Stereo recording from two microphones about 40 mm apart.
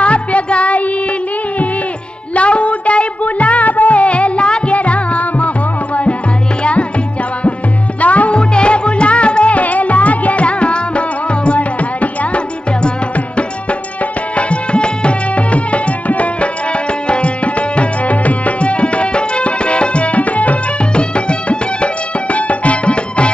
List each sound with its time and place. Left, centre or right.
0.0 s music: left
2.3 s music: left
6.6 s music: left
8.0 s music: left
8.4 s music: left
14.3 s music: left
17.1 s tabla: left
20.9 s music: left